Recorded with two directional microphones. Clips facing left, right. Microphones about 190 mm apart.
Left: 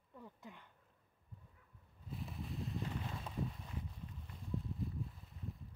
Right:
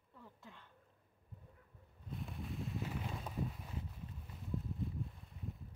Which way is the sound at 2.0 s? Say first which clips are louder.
Right 1 dB; centre (ahead or behind).